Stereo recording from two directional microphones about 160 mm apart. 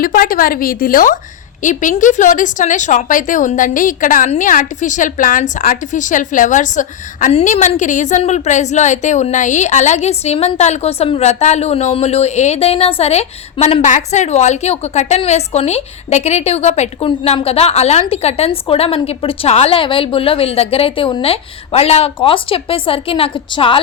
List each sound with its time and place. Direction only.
0.0 s a woman's voice: 65° left (ahead or behind); by 23.8 s 30° left (ahead or behind)